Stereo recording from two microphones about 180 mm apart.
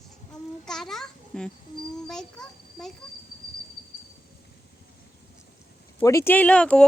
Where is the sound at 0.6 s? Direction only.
5° left (ahead or behind).